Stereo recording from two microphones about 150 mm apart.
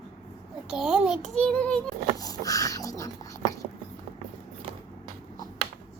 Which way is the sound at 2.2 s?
25° left (ahead or behind).